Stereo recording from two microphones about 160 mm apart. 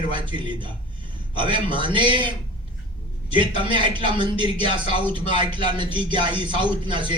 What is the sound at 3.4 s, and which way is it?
A man's voice, 30° right (ahead or behind).